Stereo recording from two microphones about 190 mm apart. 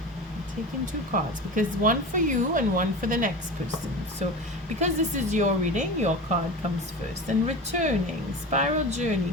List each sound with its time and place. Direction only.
1.1 s speech: 45° right (ahead or behind)
4.8 s a woman's voice: 40° right (ahead or behind)
7.4 s a woman's voice: 40° right (ahead or behind)